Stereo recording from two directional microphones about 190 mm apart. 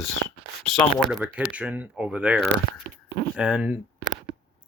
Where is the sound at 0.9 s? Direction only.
Centre (ahead or behind).